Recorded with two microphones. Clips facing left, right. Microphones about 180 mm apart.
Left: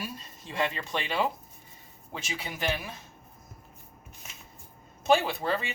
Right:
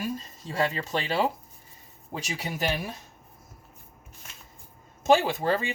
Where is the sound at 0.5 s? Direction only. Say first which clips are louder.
Right 3 dB; 40° right (ahead or behind).